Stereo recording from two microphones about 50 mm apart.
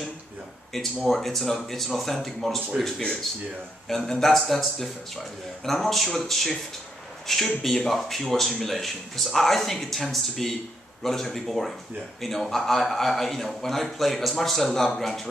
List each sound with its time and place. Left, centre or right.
1.0 s speech: centre